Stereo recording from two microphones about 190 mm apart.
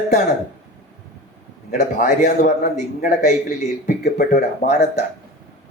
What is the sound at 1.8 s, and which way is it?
A man's voice, 40° left (ahead or behind).